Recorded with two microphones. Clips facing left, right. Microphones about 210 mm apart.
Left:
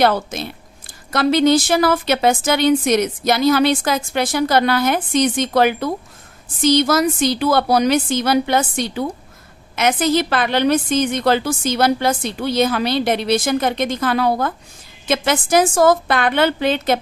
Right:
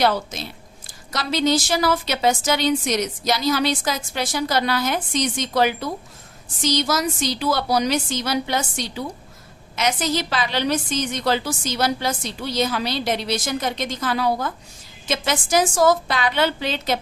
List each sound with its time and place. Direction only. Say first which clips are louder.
0.0 s a woman's voice: left 4 dB; 55° left (ahead or behind)